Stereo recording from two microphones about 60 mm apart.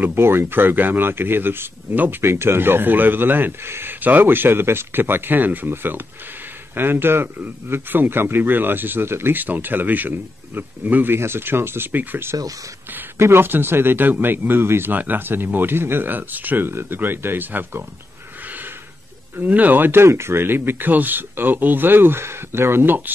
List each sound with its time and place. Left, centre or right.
0.0 s speech: right
19.3 s speech: right